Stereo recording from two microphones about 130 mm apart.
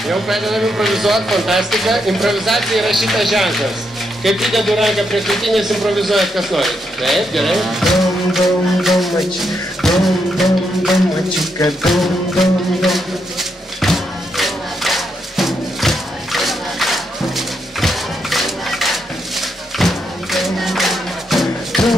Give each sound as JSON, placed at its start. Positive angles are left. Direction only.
{"t": 0.1, "sound": "a man's voice", "side_deg": 0}
{"t": 11.8, "sound": "music", "side_deg": 0}